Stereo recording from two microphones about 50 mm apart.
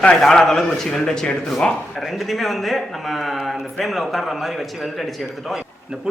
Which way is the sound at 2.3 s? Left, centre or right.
Centre.